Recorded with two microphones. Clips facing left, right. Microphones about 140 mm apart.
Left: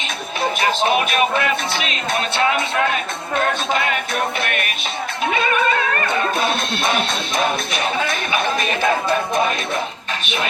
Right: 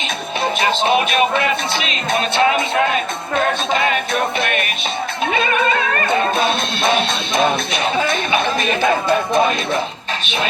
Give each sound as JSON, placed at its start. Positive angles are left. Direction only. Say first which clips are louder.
{"t": 0.6, "sound": "speech", "louder": "right 2 dB", "side_deg": -25}
{"t": 3.7, "sound": "music", "louder": "right 3 dB", "side_deg": -25}
{"t": 6.1, "sound": "music", "louder": "right 3 dB", "side_deg": -25}
{"t": 10.2, "sound": "speech", "louder": "right 2 dB", "side_deg": -30}